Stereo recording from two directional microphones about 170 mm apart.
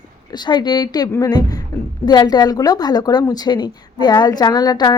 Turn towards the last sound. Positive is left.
turn(degrees=25)  # may be behind; listen again after turning